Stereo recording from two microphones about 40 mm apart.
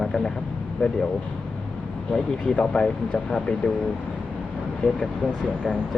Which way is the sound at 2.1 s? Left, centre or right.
Left.